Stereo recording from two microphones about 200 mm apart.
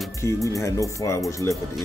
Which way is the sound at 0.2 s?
15° left (ahead or behind).